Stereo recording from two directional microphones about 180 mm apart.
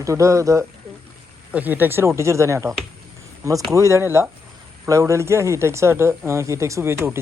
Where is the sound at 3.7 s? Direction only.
15° right (ahead or behind).